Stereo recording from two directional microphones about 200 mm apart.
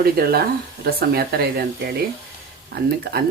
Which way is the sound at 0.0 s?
50° right (ahead or behind).